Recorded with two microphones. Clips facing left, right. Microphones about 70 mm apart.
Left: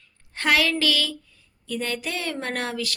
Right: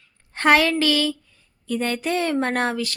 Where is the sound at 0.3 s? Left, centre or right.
Right.